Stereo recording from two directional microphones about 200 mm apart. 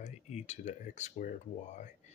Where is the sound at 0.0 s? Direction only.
35° left (ahead or behind).